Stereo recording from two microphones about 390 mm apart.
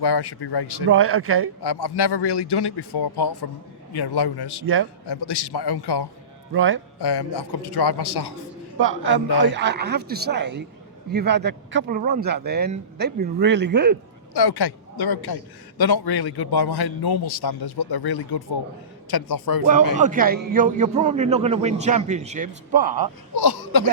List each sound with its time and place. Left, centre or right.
0.0 s a man's voice: left
0.9 s speech: right
1.6 s a man's voice: left
4.6 s speech: right
5.0 s a man's voice: left
6.5 s speech: right
7.0 s a man's voice: left
8.8 s a man's voice: right
14.3 s a man's voice: left
20.0 s a man's voice: centre
23.3 s speech: left